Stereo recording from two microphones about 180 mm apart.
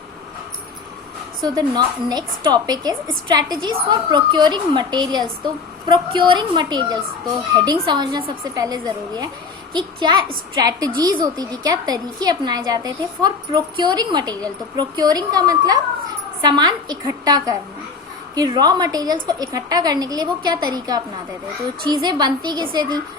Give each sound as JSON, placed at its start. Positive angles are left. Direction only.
{"t": 1.4, "sound": "a woman's voice", "side_deg": -20}